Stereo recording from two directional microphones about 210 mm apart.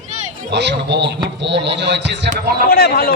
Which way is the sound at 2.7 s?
45° left (ahead or behind).